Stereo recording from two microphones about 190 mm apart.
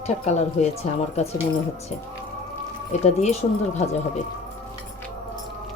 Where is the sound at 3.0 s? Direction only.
35° left (ahead or behind).